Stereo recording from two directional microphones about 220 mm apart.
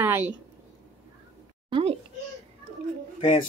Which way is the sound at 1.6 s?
25° right (ahead or behind).